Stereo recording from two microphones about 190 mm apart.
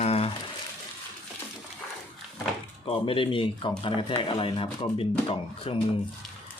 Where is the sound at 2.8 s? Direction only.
30° left (ahead or behind).